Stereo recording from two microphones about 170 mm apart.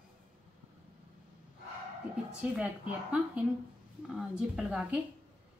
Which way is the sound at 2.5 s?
5° right (ahead or behind).